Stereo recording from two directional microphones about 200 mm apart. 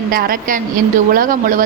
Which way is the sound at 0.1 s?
45° right (ahead or behind).